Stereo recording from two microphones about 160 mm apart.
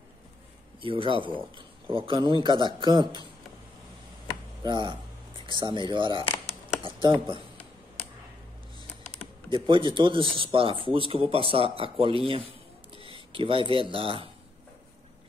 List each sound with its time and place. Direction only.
0.7 s a man's voice: 35° right (ahead or behind)
4.6 s a man's voice: 30° right (ahead or behind)
9.5 s speech: 30° right (ahead or behind)